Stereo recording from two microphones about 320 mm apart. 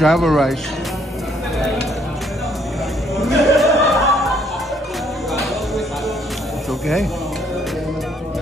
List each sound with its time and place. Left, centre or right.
0.0 s speech: centre
3.2 s music: centre